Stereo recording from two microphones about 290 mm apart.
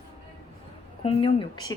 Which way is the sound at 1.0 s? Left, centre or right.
Centre.